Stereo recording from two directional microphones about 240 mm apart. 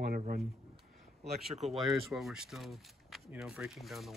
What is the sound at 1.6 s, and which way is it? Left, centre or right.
Speech, centre.